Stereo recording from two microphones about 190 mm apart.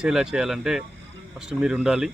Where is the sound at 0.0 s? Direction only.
5° right (ahead or behind).